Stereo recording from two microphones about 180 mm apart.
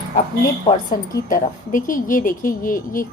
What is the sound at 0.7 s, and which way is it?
Speech, 20° left (ahead or behind).